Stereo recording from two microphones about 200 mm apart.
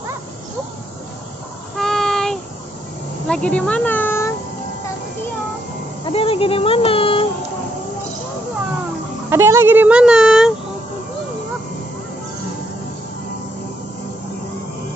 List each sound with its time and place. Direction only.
1.8 s child singing: centre (ahead or behind)
3.3 s speech: 5° left (ahead or behind)
6.1 s speech: 30° left (ahead or behind)
9.3 s speech: 15° right (ahead or behind)